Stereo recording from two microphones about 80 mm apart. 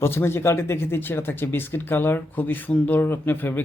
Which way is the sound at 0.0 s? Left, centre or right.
Left.